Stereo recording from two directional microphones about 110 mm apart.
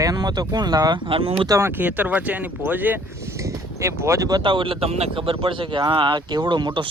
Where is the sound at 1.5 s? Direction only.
25° right (ahead or behind).